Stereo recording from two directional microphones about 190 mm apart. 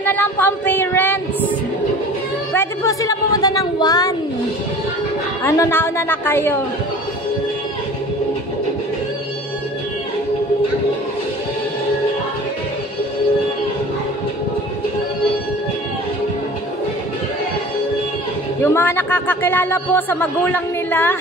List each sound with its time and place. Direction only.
0.0 s speech: 10° left (ahead or behind)
2.5 s a sound: 15° left (ahead or behind)
5.4 s speech: 15° left (ahead or behind)
18.6 s speech: 10° left (ahead or behind)